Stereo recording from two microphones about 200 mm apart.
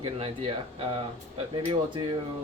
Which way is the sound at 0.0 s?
30° right (ahead or behind).